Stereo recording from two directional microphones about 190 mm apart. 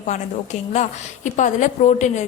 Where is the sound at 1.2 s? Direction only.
40° left (ahead or behind).